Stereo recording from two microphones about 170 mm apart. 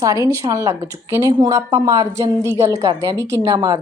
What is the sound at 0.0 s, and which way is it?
A woman's voice, 20° right (ahead or behind).